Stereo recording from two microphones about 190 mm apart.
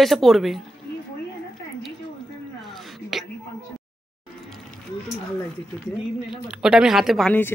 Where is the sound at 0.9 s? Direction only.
55° left (ahead or behind).